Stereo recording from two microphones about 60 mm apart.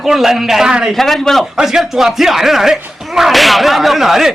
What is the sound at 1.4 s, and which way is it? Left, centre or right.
A man's voice, centre.